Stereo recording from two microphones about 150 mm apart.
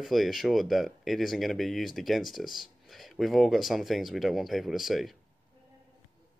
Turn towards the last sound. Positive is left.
turn(degrees=0)  # may be behind; listen again after turning